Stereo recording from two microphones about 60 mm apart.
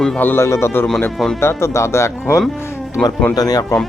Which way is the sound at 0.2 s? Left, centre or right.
Left.